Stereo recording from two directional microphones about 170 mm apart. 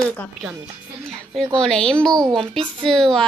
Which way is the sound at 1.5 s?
5° left (ahead or behind).